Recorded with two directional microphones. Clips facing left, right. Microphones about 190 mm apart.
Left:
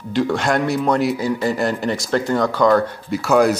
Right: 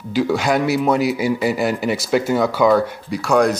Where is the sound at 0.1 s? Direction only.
5° right (ahead or behind).